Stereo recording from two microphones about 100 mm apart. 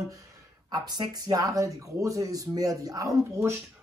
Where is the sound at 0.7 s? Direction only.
45° right (ahead or behind).